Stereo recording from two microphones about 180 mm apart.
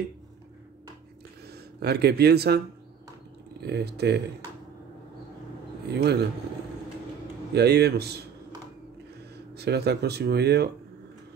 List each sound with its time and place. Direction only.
1.5 s speech: 65° right (ahead or behind)
3.6 s speech: 65° right (ahead or behind)
5.9 s a man's voice: 65° right (ahead or behind)
7.5 s speech: 65° right (ahead or behind)
9.5 s speech: 65° right (ahead or behind)